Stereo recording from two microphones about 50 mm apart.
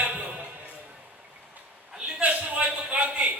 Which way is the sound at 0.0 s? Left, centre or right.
Right.